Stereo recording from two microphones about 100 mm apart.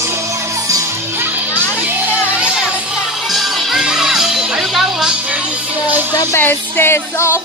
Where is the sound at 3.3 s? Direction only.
Centre (ahead or behind).